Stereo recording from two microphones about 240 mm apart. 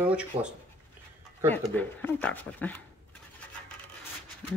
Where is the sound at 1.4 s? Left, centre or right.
Centre.